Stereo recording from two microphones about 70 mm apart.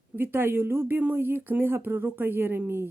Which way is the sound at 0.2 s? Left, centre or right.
Right.